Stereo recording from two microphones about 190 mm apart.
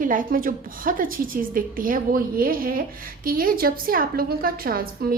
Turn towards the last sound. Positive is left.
turn(degrees=-50)  # may be behind; listen again after turning